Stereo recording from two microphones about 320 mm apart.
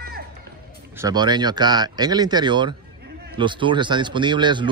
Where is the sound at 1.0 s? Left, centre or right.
Centre.